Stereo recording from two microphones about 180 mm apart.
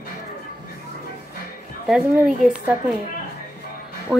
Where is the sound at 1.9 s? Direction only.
5° right (ahead or behind).